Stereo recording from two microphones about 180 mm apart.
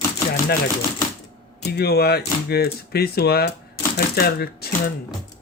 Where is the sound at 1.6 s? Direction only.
60° left (ahead or behind).